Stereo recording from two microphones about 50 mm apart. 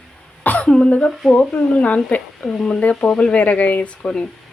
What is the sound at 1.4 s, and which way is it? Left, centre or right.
Speech, left.